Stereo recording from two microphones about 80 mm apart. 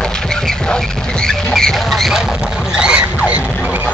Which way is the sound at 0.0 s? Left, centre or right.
Centre.